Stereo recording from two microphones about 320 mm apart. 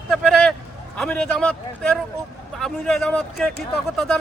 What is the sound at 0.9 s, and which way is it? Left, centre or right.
A man's voice, centre.